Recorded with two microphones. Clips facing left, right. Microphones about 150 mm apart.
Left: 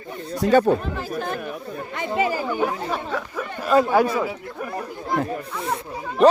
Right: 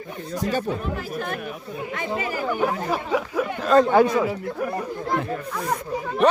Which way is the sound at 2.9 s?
10° right (ahead or behind).